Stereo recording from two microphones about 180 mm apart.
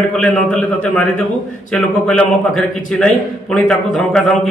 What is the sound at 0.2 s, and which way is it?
A man's voice, 5° left (ahead or behind).